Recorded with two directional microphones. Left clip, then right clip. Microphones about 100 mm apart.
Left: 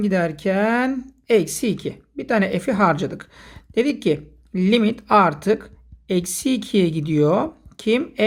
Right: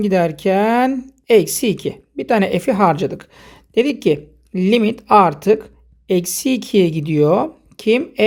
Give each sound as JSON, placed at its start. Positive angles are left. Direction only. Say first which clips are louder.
{"t": 0.0, "sound": "speech", "louder": "right 5 dB", "side_deg": -45}